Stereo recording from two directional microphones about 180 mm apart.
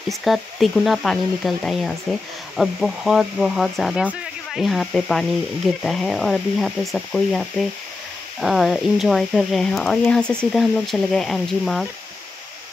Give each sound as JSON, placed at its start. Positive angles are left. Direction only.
{"t": 0.1, "sound": "speech", "side_deg": 0}